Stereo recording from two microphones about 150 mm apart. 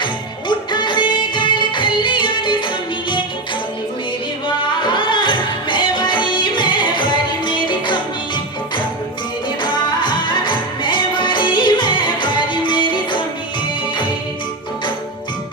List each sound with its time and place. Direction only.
0.0 s music: 30° left (ahead or behind)
4.7 s music: 30° left (ahead or behind)
9.6 s music: 30° left (ahead or behind)